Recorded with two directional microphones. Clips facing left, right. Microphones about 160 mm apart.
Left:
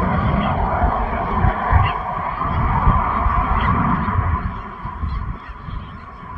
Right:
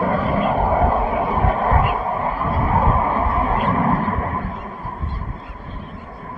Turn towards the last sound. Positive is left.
turn(degrees=-40)  # may be behind; listen again after turning